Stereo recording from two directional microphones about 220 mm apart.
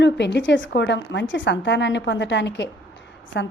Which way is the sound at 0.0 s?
50° left (ahead or behind).